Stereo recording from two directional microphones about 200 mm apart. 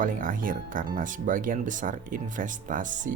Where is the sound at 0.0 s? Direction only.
40° right (ahead or behind).